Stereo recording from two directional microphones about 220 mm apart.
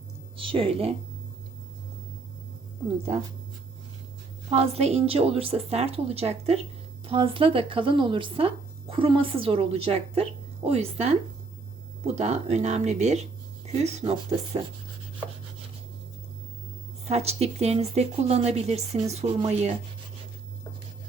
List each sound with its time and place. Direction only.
0.3 s speech: 25° right (ahead or behind)
4.4 s speech: 30° right (ahead or behind)
17.1 s speech: 30° right (ahead or behind)